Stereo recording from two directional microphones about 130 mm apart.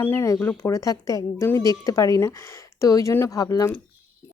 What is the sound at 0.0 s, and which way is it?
A woman's voice, 20° left (ahead or behind).